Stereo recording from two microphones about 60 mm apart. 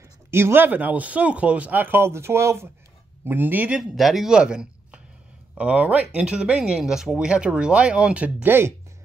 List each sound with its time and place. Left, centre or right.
0.3 s speech: right
0.7 s speech: right
1.8 s speech: right
3.3 s speech: right
3.9 s speech: centre; by 8.5 s right
8.5 s speech: right